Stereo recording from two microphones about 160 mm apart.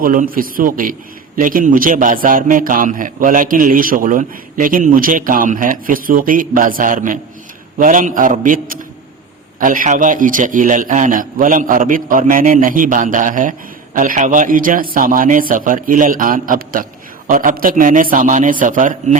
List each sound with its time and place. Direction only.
0.0 s a man's voice: 60° right (ahead or behind)